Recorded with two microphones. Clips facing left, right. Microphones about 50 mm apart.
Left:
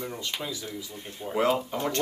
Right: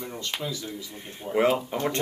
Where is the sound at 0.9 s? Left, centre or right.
Right.